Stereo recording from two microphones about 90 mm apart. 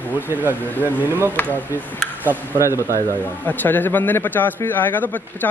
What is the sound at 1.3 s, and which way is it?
Speech, 20° left (ahead or behind).